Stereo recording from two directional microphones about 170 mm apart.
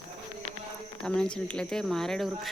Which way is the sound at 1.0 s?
5° left (ahead or behind).